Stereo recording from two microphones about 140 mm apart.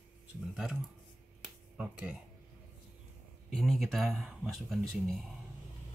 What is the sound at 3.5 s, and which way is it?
Speech, centre (ahead or behind).